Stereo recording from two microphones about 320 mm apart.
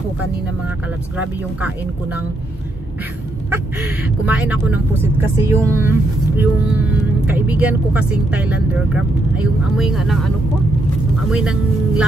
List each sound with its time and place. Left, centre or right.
4.3 s speech: centre
11.2 s speech: centre